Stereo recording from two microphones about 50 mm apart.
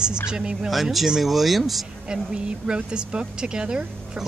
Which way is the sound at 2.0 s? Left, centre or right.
Centre.